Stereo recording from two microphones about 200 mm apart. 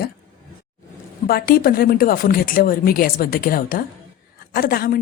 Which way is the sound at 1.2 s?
50° left (ahead or behind).